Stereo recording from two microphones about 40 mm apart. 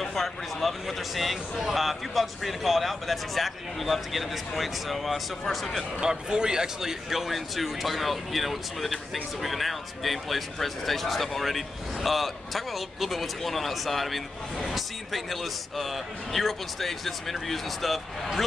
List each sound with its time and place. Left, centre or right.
0.0 s speech: centre
5.9 s speech: centre